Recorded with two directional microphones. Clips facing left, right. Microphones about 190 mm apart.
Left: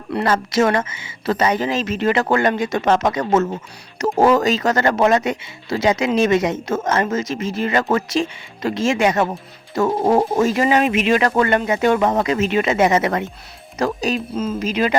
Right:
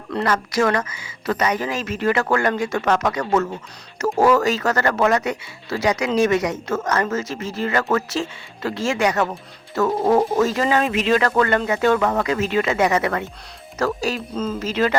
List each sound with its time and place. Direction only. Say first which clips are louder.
0.3 s speech: left 3 dB; 25° left (ahead or behind)